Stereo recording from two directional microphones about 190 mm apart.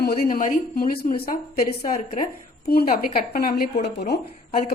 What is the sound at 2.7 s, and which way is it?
Speech, 55° left (ahead or behind).